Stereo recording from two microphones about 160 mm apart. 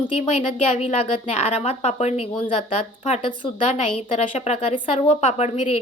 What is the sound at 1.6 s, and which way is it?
Speech, 45° left (ahead or behind).